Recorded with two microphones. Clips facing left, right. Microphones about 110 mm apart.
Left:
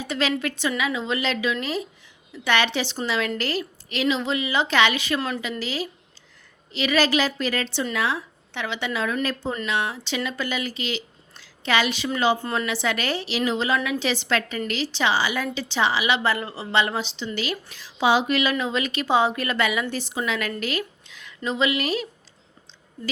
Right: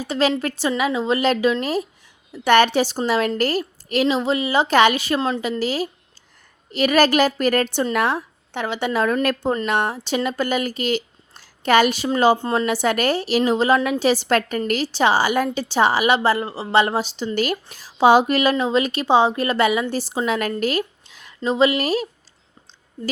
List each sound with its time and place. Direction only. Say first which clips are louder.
0.0 s a woman's voice: right 5 dB; 40° right (ahead or behind)
12.6 s a woman's voice: right 6 dB; 45° right (ahead or behind)